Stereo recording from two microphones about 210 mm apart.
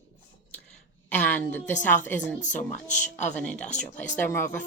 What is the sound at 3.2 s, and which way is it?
A woman's voice, 5° left (ahead or behind).